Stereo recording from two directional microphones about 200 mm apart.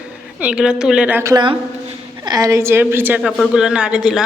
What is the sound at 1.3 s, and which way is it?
A man's voice, 25° right (ahead or behind).